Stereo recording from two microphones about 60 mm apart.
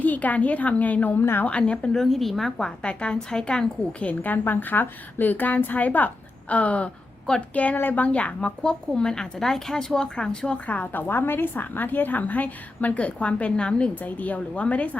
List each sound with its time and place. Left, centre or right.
0.0 s a woman's voice: left
1.5 s speech: centre
2.0 s a woman's voice: centre
2.8 s a woman's voice: centre
4.0 s a woman's voice: left